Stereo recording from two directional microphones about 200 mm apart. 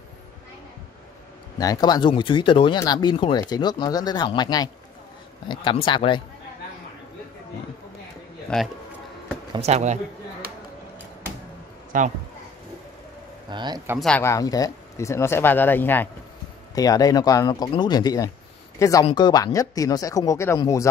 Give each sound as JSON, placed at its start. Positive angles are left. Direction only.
{"t": 1.6, "sound": "speech", "side_deg": 20}
{"t": 9.5, "sound": "speech", "side_deg": -35}
{"t": 11.9, "sound": "speech", "side_deg": -40}
{"t": 13.5, "sound": "speech", "side_deg": -20}
{"t": 13.9, "sound": "speech", "side_deg": 5}